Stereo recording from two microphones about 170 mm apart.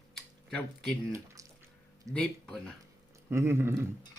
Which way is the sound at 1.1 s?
20° right (ahead or behind).